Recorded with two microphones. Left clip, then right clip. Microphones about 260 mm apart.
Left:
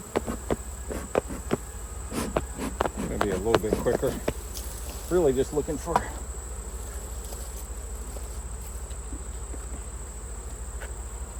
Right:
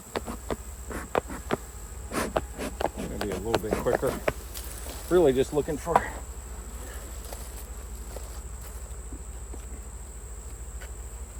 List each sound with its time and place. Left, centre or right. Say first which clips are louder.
0.1 s insect: left 4 dB; centre
5.1 s speech: right 2 dB; right